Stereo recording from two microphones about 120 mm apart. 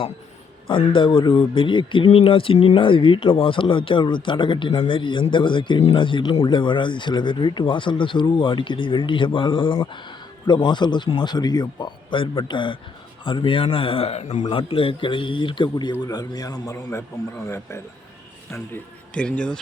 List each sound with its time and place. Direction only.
0.7 s speech: 45° left (ahead or behind); by 14.4 s 70° left (ahead or behind)
14.4 s speech: 50° left (ahead or behind); by 17.8 s 25° left (ahead or behind)
19.1 s speech: 10° left (ahead or behind)